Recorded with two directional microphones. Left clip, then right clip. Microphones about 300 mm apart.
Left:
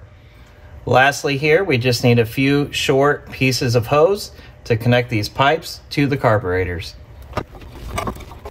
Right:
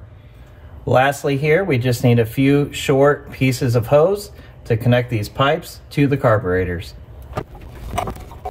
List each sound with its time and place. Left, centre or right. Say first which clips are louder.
0.8 s speech: left 1 dB; left